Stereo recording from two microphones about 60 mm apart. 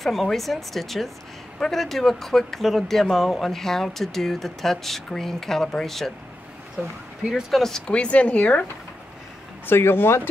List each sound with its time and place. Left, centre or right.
0.0 s speech: centre
7.5 s speech: centre; by 8.6 s left
9.7 s speech: left